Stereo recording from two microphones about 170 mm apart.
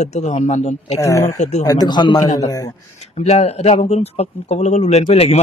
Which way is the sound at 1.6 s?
25° left (ahead or behind).